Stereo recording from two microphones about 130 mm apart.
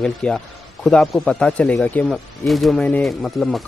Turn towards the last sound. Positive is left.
turn(degrees=0)  # may be behind; listen again after turning